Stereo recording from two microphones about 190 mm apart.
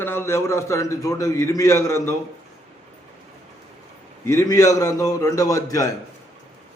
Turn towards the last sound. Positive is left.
turn(degrees=15)  # may be behind; listen again after turning